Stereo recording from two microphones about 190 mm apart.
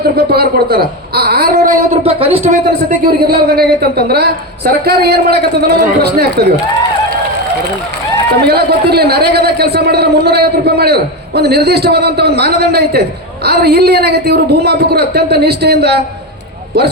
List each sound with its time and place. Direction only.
0.3 s speech: 55° right (ahead or behind)
1.9 s speech: 30° right (ahead or behind)
3.2 s a man's voice: 55° right (ahead or behind)
8.4 s a man's voice: 55° right (ahead or behind)